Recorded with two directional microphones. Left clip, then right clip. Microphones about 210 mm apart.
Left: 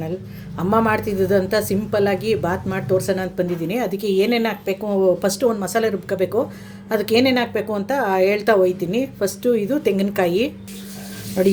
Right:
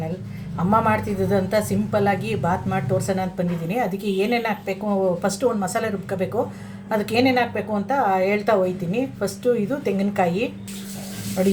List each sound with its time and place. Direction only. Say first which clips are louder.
0.7 s a woman's voice: left 1 dB; 40° left (ahead or behind)